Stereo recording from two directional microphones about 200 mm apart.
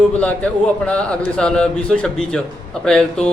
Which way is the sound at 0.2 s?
5° left (ahead or behind).